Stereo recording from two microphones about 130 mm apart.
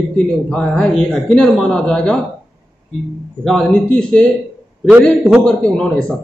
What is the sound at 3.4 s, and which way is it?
Speech, 5° left (ahead or behind).